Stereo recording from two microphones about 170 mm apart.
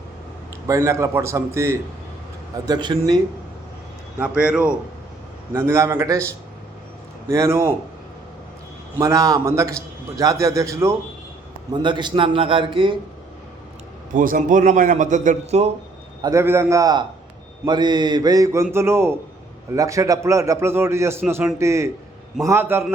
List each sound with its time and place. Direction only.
0.7 s a man's voice: 15° right (ahead or behind)
4.2 s a man's voice: 5° right (ahead or behind)
5.5 s a man's voice: 15° right (ahead or behind)
7.3 s a man's voice: 15° right (ahead or behind)
9.0 s a man's voice: 20° right (ahead or behind)
14.1 s a man's voice: 50° right (ahead or behind)
16.2 s a man's voice: 15° right (ahead or behind)